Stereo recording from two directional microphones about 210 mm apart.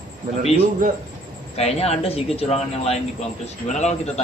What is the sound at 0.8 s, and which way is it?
Speech, 40° right (ahead or behind).